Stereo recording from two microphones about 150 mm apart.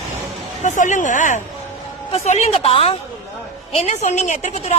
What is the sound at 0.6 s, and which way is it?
Speech, 55° left (ahead or behind).